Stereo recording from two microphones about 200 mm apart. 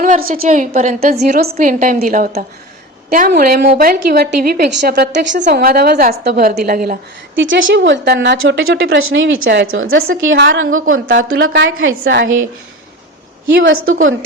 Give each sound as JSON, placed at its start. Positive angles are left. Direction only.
{"t": 0.0, "sound": "a woman's voice", "side_deg": -45}
{"t": 1.2, "sound": "a woman's voice", "side_deg": -50}
{"t": 7.3, "sound": "a woman's voice", "side_deg": -70}
{"t": 7.7, "sound": "a woman's voice", "side_deg": -60}
{"t": 9.4, "sound": "a woman's voice", "side_deg": -60}
{"t": 10.8, "sound": "speech", "side_deg": -90}
{"t": 11.3, "sound": "a woman's voice", "side_deg": -75}
{"t": 13.6, "sound": "a woman's voice", "side_deg": -70}